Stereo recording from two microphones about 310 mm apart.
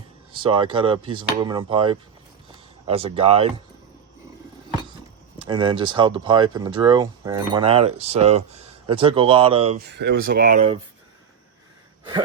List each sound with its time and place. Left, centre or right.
0.3 s speech: centre
5.4 s speech: centre
9.9 s speech: right